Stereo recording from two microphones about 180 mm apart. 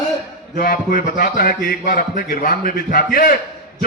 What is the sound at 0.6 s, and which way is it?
A man's voice, 55° left (ahead or behind).